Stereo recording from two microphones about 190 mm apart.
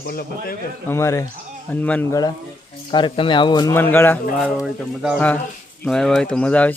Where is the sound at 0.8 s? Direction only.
15° left (ahead or behind).